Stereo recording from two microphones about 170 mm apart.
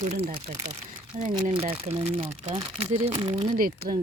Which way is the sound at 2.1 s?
55° right (ahead or behind).